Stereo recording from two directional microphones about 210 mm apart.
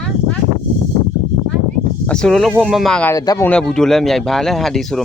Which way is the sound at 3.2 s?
20° left (ahead or behind).